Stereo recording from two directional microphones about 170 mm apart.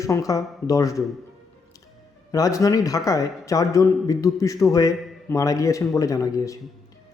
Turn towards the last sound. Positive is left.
turn(degrees=20)  # may be behind; listen again after turning